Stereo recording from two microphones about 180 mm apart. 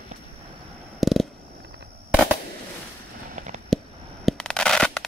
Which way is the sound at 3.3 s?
40° right (ahead or behind).